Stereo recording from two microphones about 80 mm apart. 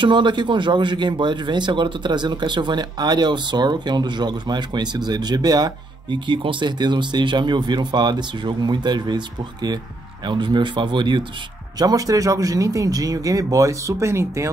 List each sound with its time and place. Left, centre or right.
0.0 s a man's voice: right
11.8 s speech: right